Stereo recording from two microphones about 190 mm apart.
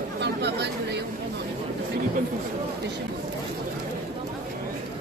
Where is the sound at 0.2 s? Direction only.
65° right (ahead or behind).